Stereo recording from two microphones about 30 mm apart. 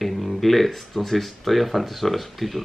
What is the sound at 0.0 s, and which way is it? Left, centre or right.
Speech, centre.